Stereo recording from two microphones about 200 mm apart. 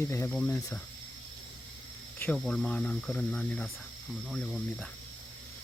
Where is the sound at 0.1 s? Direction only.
15° left (ahead or behind).